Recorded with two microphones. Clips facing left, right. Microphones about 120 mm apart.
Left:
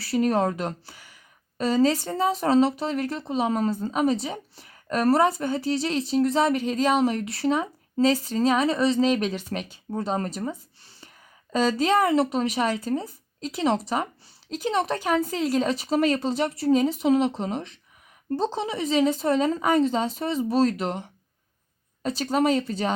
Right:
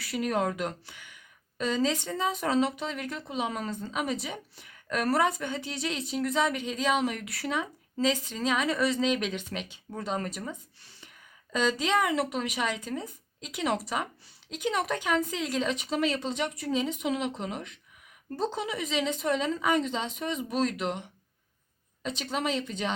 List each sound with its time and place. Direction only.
0.0 s a woman's voice: 30° left (ahead or behind)